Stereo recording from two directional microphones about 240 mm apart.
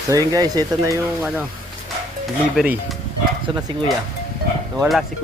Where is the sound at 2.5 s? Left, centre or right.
Centre.